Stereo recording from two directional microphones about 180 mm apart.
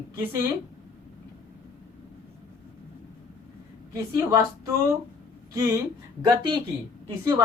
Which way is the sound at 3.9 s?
15° right (ahead or behind).